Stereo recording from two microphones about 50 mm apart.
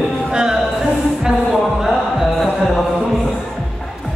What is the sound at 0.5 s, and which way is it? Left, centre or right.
Music, centre.